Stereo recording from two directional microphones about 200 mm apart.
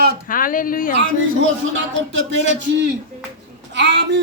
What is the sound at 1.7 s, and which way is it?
Speech, 70° right (ahead or behind).